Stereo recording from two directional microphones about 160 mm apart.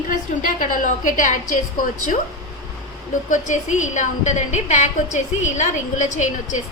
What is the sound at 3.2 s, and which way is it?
A woman's voice, 50° left (ahead or behind).